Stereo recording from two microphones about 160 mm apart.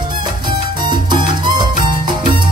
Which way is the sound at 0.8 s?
30° right (ahead or behind).